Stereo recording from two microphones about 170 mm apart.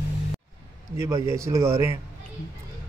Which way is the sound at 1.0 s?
15° right (ahead or behind).